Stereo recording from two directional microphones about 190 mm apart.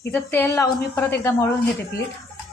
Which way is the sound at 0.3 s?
15° left (ahead or behind).